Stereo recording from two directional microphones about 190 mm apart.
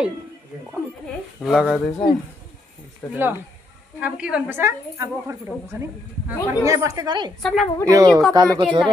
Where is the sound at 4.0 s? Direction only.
5° right (ahead or behind); by 7.3 s 20° right (ahead or behind).